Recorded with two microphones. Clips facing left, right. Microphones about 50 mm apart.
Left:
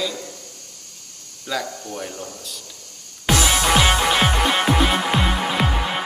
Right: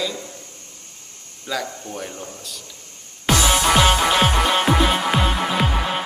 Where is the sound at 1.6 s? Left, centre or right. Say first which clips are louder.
Left 1 dB; right.